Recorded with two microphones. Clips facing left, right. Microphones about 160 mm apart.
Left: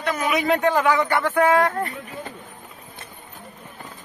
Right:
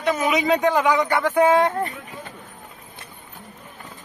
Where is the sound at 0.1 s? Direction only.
20° right (ahead or behind).